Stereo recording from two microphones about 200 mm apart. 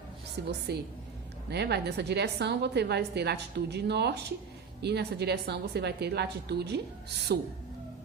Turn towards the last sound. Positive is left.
turn(degrees=-55)  # may be behind; listen again after turning